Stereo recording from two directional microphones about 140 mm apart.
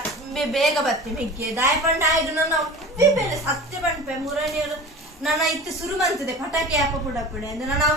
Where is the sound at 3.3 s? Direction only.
Centre (ahead or behind).